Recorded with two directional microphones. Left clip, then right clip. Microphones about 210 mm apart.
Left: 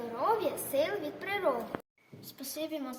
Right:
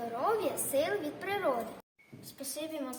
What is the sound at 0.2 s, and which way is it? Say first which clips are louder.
A woman's voice: left 2 dB; 15° right (ahead or behind).